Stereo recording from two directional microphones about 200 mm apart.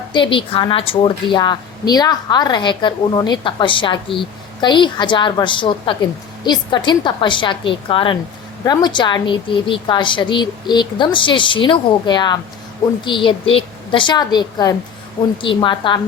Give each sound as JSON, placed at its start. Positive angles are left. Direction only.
{"t": 0.1, "sound": "a woman's voice", "side_deg": 25}